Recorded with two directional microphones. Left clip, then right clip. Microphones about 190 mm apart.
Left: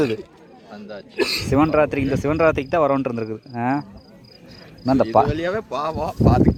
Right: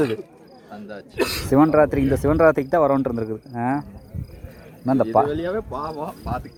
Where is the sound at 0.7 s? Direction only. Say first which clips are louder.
Left 1 dB; 30° right (ahead or behind).